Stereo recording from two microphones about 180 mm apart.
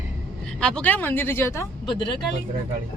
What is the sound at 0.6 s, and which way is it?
Speech, 5° left (ahead or behind).